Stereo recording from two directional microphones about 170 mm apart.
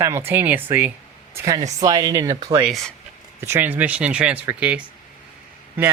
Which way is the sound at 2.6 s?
Centre (ahead or behind).